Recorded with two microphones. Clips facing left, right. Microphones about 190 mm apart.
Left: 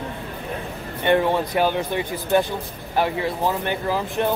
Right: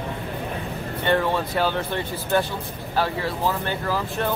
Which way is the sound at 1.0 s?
15° left (ahead or behind).